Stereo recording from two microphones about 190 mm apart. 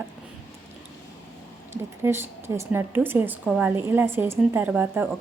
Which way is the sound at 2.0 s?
15° right (ahead or behind).